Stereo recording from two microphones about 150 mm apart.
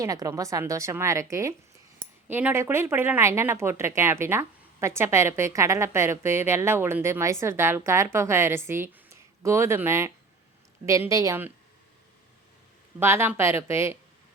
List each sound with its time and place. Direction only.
0.0 s a woman's voice: 25° right (ahead or behind)
13.0 s speech: 15° right (ahead or behind)